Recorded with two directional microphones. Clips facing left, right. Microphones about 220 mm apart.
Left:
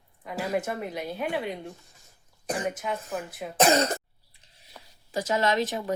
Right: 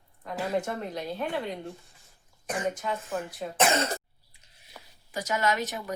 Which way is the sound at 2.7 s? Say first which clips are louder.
Even; 5° left (ahead or behind).